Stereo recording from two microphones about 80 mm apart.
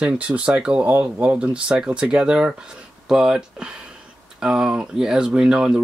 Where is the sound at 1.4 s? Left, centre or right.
Centre.